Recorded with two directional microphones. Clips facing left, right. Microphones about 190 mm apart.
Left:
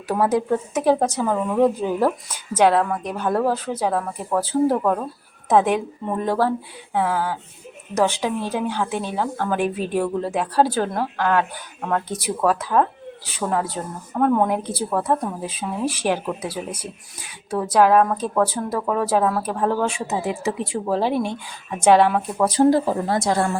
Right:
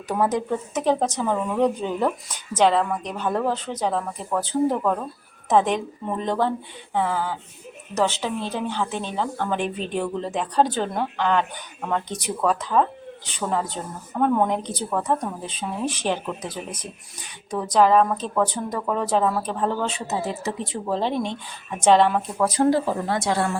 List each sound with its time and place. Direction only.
0.1 s speech: 10° left (ahead or behind)
22.4 s a woman's voice: 30° left (ahead or behind)